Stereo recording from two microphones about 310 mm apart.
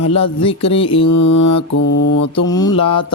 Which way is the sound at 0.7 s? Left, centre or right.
Centre.